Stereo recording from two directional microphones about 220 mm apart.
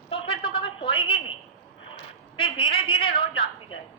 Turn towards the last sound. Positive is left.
turn(degrees=25)  # may be behind; listen again after turning